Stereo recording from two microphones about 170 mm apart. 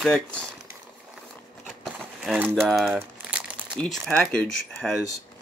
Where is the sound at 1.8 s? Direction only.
Centre (ahead or behind).